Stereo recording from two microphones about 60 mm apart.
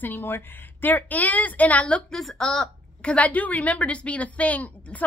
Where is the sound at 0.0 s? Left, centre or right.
Left.